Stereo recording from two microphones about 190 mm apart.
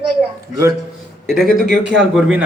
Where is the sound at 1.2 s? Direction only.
Centre (ahead or behind).